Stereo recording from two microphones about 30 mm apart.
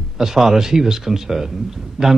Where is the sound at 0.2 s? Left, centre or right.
Centre.